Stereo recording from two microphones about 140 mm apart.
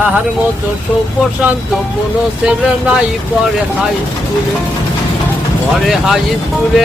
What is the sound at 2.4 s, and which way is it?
Speech, 5° right (ahead or behind).